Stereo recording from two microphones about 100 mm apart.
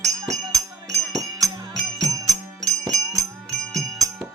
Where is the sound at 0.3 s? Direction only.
35° right (ahead or behind).